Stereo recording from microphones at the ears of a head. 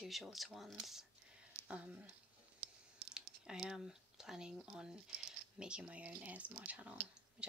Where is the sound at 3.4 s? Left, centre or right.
Centre.